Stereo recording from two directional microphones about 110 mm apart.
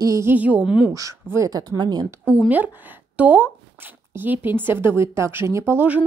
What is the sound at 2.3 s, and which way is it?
A woman's voice, 15° right (ahead or behind).